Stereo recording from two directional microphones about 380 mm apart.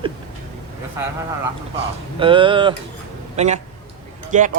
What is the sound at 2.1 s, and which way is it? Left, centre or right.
A man's voice, centre.